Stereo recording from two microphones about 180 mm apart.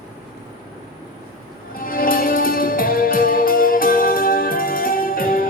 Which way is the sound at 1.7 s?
50° left (ahead or behind).